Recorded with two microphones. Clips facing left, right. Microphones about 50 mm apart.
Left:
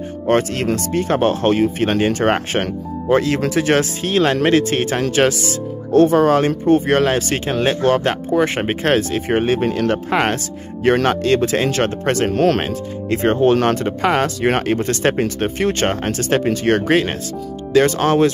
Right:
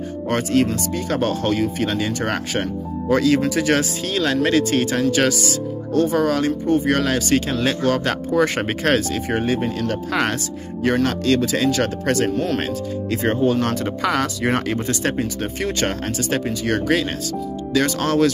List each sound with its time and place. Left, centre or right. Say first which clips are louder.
0.3 s speech: left 2 dB; left
10.0 s speech: left 3 dB; left
12.3 s speech: left 6 dB; left
12.5 s speech: left 1 dB; left
13.2 s speech: left 5 dB; left
13.7 s speech: left 4 dB; left